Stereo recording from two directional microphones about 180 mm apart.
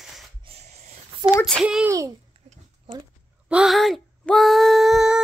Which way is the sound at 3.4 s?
5° right (ahead or behind).